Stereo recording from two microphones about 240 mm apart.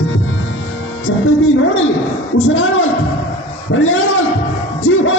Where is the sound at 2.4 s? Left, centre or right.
Left.